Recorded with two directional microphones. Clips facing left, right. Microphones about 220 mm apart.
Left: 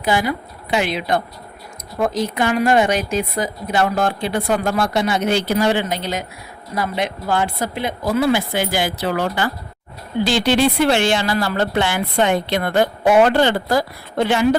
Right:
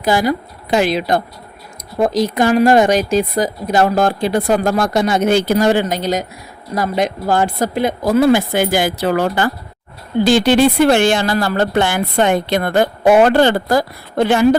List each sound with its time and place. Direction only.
0.0 s a woman's voice: 40° right (ahead or behind)
2.3 s a woman's voice: 40° right (ahead or behind)